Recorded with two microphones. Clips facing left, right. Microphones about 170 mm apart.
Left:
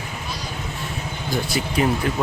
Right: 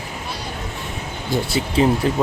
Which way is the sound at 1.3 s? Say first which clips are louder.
Right 3 dB; 25° right (ahead or behind).